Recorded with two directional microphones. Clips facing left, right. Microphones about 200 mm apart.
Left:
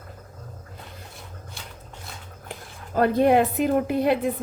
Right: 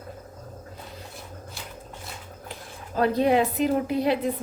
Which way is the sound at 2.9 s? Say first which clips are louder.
Left 3 dB; 50° left (ahead or behind).